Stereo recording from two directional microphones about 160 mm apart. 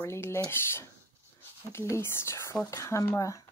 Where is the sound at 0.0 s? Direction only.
15° left (ahead or behind).